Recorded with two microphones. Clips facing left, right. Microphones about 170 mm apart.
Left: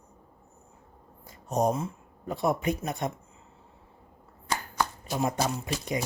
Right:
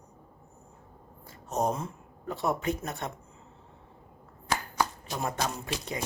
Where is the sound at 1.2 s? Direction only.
15° left (ahead or behind).